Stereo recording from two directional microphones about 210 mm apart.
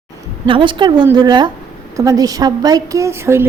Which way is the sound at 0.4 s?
25° right (ahead or behind).